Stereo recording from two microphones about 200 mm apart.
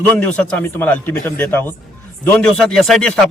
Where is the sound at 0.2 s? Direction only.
5° left (ahead or behind).